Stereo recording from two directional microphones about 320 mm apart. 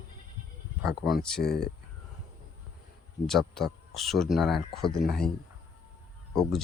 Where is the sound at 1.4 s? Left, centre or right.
Left.